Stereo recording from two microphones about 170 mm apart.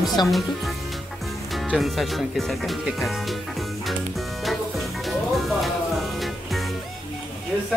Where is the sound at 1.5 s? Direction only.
Centre (ahead or behind).